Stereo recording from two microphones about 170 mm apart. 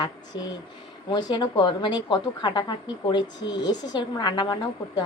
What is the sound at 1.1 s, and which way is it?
A woman's voice, 25° left (ahead or behind).